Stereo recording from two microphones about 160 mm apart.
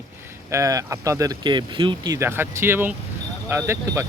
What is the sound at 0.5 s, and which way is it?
Speech, 20° right (ahead or behind).